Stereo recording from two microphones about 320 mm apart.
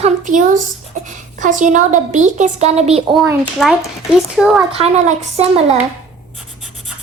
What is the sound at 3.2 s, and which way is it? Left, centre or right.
A child's voice, centre.